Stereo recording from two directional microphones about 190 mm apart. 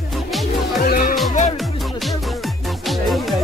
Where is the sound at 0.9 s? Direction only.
50° left (ahead or behind).